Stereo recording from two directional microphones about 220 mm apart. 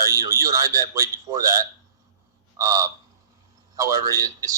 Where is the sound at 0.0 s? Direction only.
15° right (ahead or behind).